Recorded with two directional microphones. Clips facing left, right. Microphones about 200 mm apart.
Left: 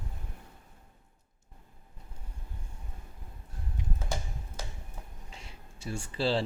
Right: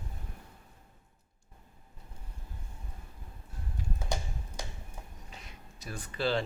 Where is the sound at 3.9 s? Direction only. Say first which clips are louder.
Right 2 dB; 15° right (ahead or behind).